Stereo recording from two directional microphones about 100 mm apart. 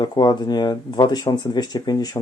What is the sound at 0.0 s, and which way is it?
Speech, 45° left (ahead or behind).